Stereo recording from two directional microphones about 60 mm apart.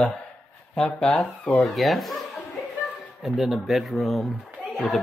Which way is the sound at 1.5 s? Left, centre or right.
Centre.